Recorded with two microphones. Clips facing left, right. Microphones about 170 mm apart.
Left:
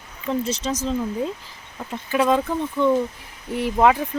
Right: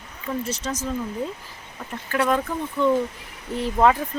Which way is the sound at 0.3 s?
15° left (ahead or behind).